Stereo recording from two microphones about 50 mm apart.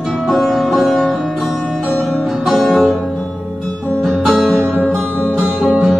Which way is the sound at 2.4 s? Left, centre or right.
Centre.